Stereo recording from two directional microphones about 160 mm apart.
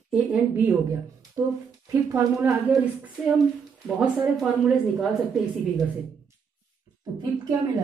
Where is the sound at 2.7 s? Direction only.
5° right (ahead or behind).